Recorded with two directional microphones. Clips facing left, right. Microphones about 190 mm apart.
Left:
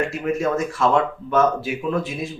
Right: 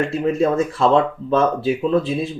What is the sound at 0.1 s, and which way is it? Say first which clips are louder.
Speech: right 4 dB; 30° right (ahead or behind).